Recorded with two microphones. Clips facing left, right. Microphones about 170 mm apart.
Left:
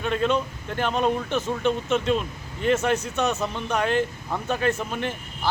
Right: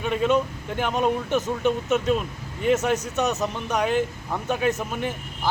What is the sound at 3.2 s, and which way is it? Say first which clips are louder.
A man's voice: even; 20° right (ahead or behind).